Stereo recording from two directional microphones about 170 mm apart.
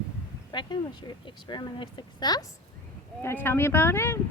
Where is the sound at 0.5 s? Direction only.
25° left (ahead or behind).